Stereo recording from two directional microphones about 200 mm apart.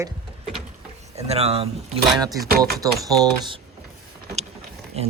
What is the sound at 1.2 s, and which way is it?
Speech, 30° right (ahead or behind).